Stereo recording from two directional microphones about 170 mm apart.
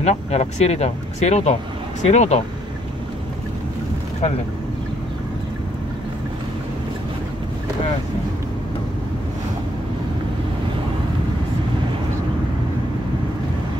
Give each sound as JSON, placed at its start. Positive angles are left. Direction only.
{"t": 0.0, "sound": "speech", "side_deg": 40}